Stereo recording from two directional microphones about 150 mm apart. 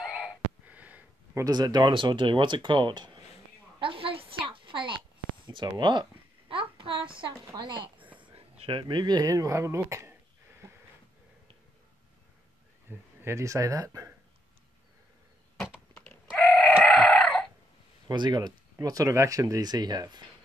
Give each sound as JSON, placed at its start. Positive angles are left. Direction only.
{"t": 0.0, "sound": "a sound", "side_deg": -5}
{"t": 1.4, "sound": "speech", "side_deg": -25}
{"t": 3.8, "sound": "a sound", "side_deg": -35}
{"t": 5.5, "sound": "a child's voice", "side_deg": -30}
{"t": 13.2, "sound": "speech", "side_deg": -20}
{"t": 15.9, "sound": "typing", "side_deg": 10}
{"t": 16.9, "sound": "chicken", "side_deg": 5}
{"t": 18.0, "sound": "speech", "side_deg": -30}